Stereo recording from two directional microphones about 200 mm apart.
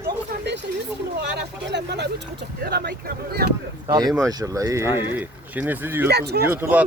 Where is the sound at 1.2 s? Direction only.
60° right (ahead or behind).